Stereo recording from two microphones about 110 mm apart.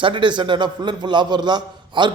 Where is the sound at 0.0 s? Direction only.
50° right (ahead or behind).